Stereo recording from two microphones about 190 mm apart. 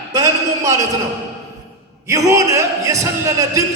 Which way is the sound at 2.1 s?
15° right (ahead or behind).